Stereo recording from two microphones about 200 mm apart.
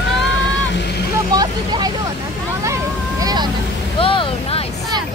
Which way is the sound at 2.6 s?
15° right (ahead or behind).